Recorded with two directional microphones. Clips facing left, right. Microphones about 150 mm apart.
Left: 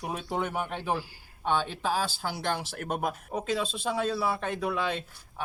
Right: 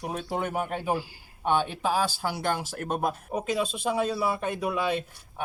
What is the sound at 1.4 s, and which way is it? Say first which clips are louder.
Speech: right 3 dB; 55° right (ahead or behind).